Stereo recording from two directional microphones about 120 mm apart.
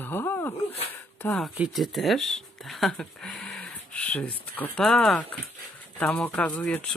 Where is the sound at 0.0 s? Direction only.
20° left (ahead or behind).